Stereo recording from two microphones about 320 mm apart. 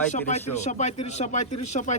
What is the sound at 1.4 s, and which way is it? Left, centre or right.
Speech, left.